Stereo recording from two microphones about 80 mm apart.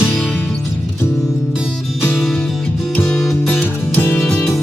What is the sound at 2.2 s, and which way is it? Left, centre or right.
Music, centre.